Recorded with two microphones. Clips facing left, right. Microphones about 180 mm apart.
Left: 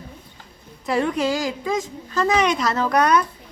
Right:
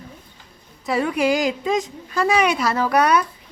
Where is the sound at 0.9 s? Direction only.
5° right (ahead or behind).